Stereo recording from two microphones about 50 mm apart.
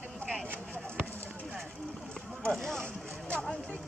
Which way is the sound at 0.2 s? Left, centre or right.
Left.